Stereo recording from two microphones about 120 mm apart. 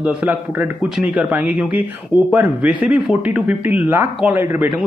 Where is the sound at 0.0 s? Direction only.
10° right (ahead or behind).